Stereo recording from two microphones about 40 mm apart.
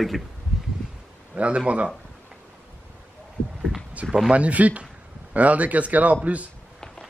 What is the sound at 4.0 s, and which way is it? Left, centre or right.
Speech, right.